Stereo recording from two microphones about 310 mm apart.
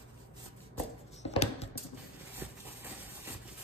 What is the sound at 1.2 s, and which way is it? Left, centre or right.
Typing, centre.